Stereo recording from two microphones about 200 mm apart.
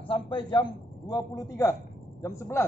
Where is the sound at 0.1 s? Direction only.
25° left (ahead or behind).